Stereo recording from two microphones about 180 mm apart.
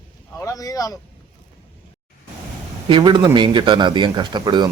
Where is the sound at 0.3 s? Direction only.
20° left (ahead or behind).